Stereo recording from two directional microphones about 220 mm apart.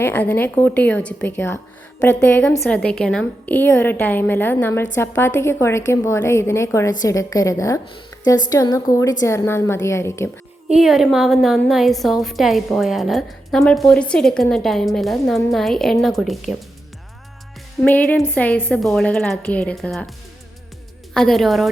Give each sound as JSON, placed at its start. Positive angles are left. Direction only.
{"t": 0.0, "sound": "a woman's voice", "side_deg": 10}
{"t": 8.1, "sound": "a sound", "side_deg": 15}
{"t": 8.4, "sound": "a woman's voice", "side_deg": 15}
{"t": 10.7, "sound": "a woman's voice", "side_deg": 0}
{"t": 17.8, "sound": "a woman's voice", "side_deg": 5}
{"t": 21.1, "sound": "a woman's voice", "side_deg": 0}